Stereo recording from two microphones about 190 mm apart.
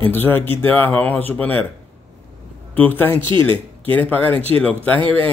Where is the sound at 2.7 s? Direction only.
10° left (ahead or behind).